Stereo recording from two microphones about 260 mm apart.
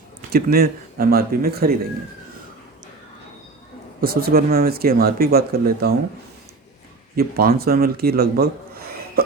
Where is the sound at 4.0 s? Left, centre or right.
Right.